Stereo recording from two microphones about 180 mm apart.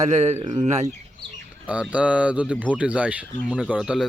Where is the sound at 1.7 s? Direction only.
5° right (ahead or behind).